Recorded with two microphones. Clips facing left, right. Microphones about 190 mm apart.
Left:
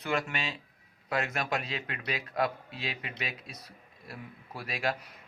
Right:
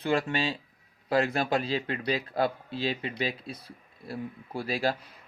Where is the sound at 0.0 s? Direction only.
30° right (ahead or behind).